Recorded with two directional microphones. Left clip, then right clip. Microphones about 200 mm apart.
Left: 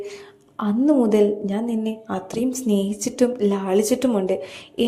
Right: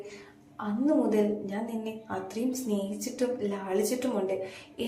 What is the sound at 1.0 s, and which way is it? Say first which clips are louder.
A woman's voice: left 9 dB; 45° left (ahead or behind).